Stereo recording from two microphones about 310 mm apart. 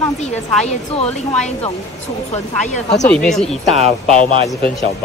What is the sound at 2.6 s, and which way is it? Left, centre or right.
Speech, left.